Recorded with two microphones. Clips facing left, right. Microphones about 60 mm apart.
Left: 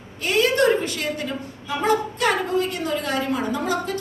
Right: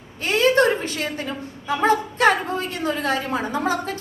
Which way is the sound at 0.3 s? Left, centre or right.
Right.